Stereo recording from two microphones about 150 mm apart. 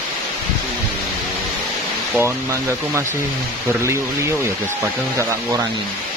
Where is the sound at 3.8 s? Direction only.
20° right (ahead or behind).